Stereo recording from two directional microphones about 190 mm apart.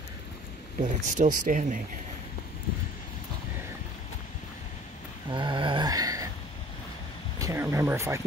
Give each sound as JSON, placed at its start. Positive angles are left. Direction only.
{"t": 0.8, "sound": "speech", "side_deg": -40}
{"t": 5.3, "sound": "a sound", "side_deg": -25}
{"t": 7.3, "sound": "speech", "side_deg": -15}